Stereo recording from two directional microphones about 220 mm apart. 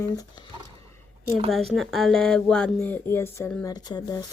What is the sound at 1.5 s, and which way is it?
Speech, centre (ahead or behind).